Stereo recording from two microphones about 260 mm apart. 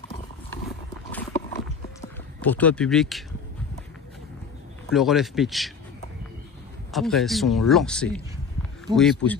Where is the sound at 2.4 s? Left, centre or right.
Centre.